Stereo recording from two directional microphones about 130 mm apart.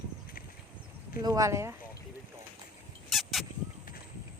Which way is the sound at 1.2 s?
25° right (ahead or behind).